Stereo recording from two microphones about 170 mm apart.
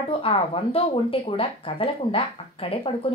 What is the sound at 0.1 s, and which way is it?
A woman's voice, 35° left (ahead or behind).